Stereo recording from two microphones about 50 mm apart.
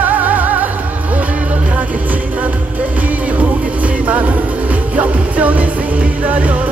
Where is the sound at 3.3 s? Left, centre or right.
Right.